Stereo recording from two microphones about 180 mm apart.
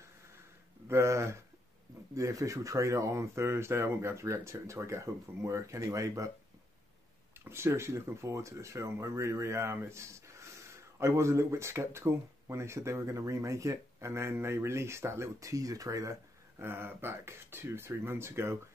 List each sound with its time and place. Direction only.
0.8 s speech: 15° right (ahead or behind)
7.4 s speech: 15° right (ahead or behind)